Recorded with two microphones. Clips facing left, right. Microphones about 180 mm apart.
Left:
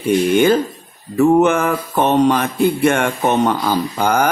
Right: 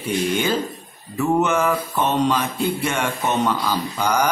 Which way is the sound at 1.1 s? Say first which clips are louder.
Left 7 dB; 55° left (ahead or behind).